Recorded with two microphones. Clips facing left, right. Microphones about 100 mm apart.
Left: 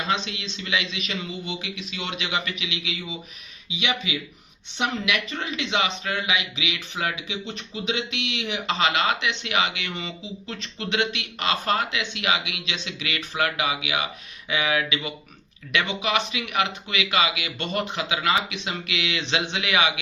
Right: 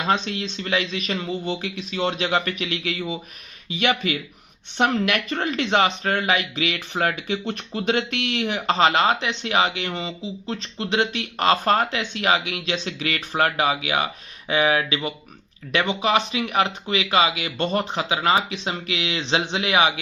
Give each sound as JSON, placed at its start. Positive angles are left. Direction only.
{"t": 0.1, "sound": "speech", "side_deg": -45}